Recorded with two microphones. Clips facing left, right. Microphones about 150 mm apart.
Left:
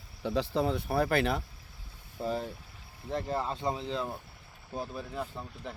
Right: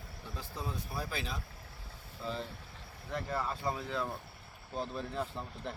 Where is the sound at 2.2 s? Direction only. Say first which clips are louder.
Left 6 dB; 45° left (ahead or behind).